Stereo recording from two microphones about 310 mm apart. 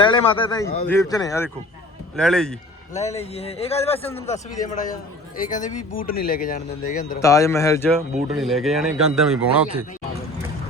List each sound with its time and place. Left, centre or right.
0.0 s a man's voice: centre
2.9 s speech: left
7.2 s a man's voice: centre